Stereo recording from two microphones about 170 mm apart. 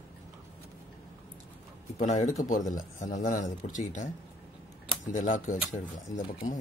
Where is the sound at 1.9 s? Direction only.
45° left (ahead or behind).